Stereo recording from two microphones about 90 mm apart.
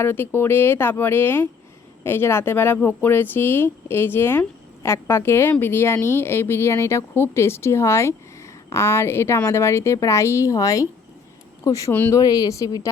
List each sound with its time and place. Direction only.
0.0 s speech: 25° left (ahead or behind)
11.9 s speech: 25° left (ahead or behind)
12.1 s speech: 45° left (ahead or behind)